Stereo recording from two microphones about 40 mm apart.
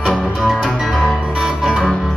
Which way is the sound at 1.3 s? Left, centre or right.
Centre.